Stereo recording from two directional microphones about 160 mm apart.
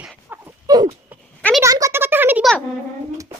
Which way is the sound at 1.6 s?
20° right (ahead or behind).